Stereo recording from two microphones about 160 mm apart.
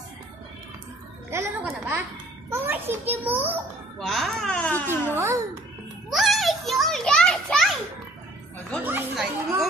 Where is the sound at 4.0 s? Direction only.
Centre (ahead or behind).